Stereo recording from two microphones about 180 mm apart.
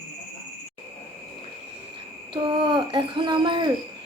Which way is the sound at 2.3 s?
25° right (ahead or behind).